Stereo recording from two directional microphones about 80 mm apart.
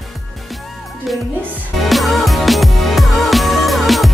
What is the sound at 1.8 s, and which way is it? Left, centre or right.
Music, centre.